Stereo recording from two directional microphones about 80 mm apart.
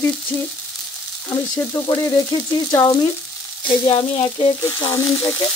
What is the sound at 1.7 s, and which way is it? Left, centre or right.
Sizzle, left.